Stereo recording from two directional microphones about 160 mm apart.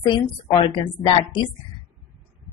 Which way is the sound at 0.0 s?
25° left (ahead or behind).